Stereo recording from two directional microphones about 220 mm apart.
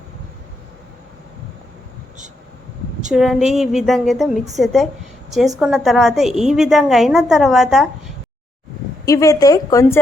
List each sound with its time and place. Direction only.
3.1 s a woman's voice: centre (ahead or behind)
9.0 s a woman's voice: 15° left (ahead or behind)